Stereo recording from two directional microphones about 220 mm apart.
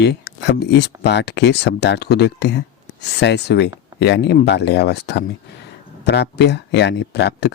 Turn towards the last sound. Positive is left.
turn(degrees=50)  # may be behind; listen again after turning